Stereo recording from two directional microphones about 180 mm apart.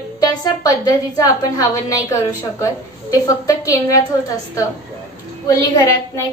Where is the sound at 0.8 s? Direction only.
20° left (ahead or behind).